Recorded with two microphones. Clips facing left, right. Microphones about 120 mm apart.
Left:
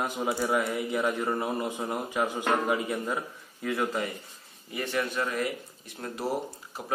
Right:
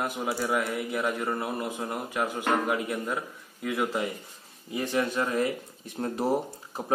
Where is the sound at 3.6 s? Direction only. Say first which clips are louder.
Right 1 dB; 10° right (ahead or behind).